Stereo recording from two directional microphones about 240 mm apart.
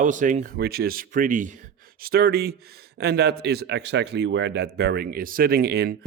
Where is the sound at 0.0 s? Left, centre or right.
Right.